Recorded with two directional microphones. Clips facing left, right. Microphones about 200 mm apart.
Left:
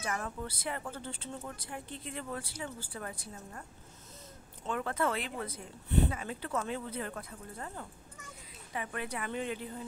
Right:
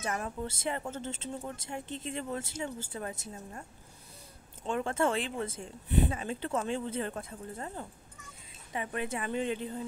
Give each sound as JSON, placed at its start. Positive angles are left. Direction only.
{"t": 0.0, "sound": "a woman's voice", "side_deg": -25}
{"t": 4.6, "sound": "a woman's voice", "side_deg": -25}